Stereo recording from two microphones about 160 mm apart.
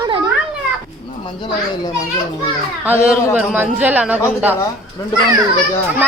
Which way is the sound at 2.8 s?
10° right (ahead or behind).